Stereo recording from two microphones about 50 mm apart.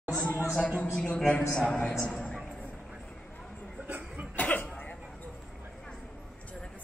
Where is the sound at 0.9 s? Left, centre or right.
Centre.